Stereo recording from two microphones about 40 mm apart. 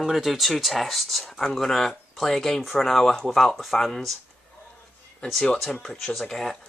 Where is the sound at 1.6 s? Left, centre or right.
Centre.